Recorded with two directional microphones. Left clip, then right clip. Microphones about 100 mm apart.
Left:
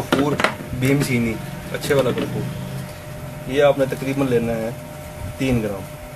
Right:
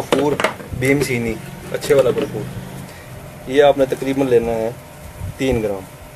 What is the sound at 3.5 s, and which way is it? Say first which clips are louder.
Speech: right 4 dB; 15° right (ahead or behind).